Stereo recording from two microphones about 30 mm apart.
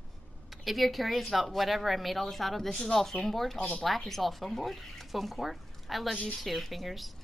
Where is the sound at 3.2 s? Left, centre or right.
Centre.